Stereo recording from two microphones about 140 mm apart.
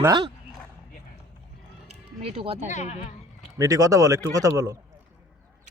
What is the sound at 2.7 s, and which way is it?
Speech, 50° left (ahead or behind).